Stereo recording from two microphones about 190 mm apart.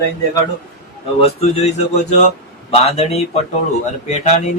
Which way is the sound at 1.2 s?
35° left (ahead or behind).